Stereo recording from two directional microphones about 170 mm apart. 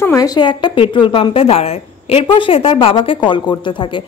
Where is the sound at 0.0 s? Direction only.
20° left (ahead or behind).